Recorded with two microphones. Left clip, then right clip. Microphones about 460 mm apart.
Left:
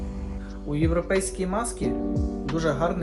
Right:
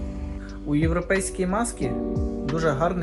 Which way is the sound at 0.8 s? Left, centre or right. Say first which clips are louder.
Left 1 dB; centre.